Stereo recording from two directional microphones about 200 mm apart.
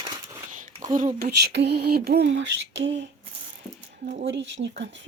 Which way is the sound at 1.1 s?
55° right (ahead or behind).